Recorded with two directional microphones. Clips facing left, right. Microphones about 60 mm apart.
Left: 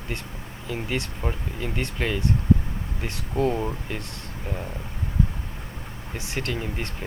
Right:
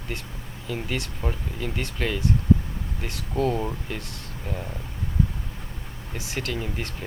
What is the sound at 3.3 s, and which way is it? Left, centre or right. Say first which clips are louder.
Speech: left 1 dB; centre.